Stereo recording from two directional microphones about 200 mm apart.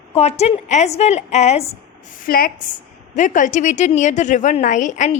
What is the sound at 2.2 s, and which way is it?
A woman's voice, 45° left (ahead or behind).